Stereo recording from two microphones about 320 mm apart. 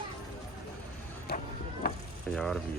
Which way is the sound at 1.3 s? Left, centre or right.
Left.